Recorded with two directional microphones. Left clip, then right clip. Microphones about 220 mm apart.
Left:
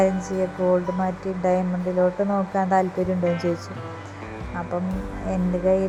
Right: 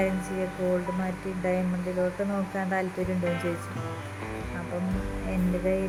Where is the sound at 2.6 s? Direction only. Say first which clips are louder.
Left 10 dB; 5° left (ahead or behind).